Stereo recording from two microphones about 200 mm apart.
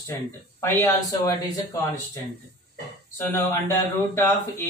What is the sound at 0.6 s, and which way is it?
Speech, 10° left (ahead or behind).